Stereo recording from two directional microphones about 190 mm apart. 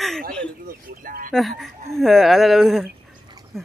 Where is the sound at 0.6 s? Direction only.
45° right (ahead or behind).